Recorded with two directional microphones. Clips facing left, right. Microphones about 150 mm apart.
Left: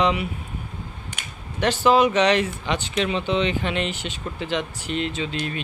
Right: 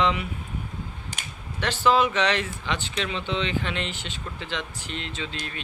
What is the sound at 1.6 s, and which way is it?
Speech, 15° left (ahead or behind).